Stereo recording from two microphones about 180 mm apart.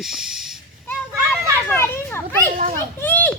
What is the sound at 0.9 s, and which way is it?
Children playing, 10° left (ahead or behind).